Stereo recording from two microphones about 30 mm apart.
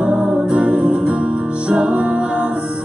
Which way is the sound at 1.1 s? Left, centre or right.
Right.